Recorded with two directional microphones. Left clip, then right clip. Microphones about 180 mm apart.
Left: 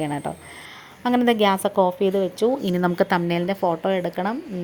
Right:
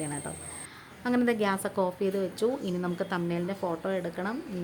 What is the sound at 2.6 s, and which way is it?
Speech, 40° left (ahead or behind).